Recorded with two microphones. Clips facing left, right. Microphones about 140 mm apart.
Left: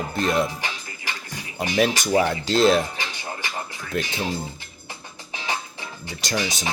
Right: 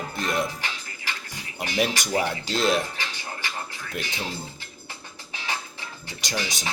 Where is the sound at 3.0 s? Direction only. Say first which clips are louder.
Left 3 dB; 15° left (ahead or behind).